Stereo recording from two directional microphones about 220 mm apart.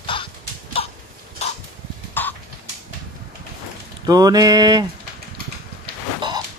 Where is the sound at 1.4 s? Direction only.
30° left (ahead or behind).